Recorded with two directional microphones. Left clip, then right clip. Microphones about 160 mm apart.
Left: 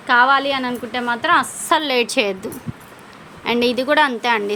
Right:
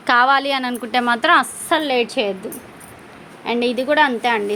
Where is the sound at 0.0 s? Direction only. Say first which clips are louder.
Even; 35° right (ahead or behind).